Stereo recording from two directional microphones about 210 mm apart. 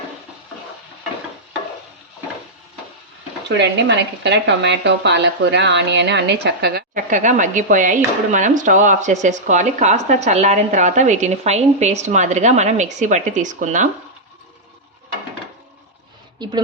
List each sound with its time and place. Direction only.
3.5 s speech: 55° right (ahead or behind); by 13.8 s 35° right (ahead or behind)
16.4 s a woman's voice: 20° right (ahead or behind)